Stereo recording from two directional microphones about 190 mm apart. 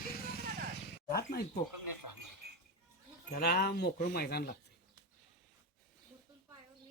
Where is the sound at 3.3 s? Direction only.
55° left (ahead or behind).